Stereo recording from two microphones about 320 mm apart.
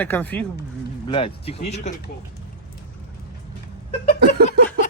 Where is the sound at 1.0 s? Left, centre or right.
Centre.